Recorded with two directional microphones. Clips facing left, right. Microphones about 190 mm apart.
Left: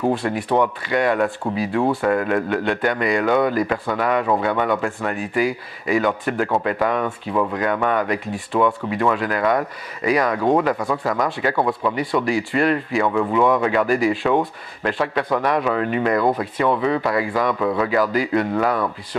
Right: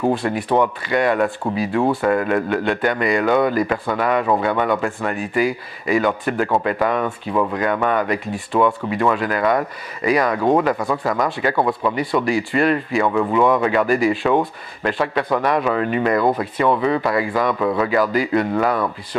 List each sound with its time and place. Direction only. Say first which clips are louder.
0.2 s speech: right 1 dB; 20° right (ahead or behind)
1.4 s speech: right 1 dB; 25° right (ahead or behind)
12.3 s speech: right 1 dB; 10° right (ahead or behind)